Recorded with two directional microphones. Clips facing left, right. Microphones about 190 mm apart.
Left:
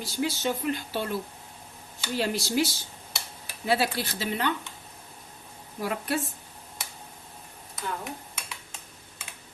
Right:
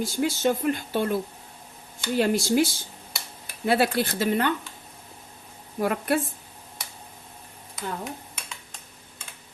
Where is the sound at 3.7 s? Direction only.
55° right (ahead or behind).